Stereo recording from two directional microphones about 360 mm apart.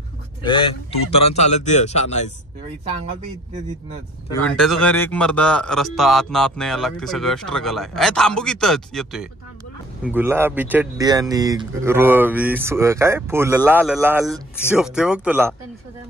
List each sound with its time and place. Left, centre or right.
0.4 s speech: centre
4.3 s a man's voice: centre